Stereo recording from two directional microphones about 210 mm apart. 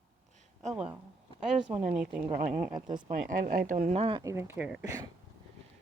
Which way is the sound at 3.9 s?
25° right (ahead or behind).